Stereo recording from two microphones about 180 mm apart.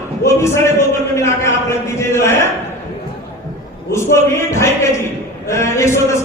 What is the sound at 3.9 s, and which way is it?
Speech, 15° left (ahead or behind).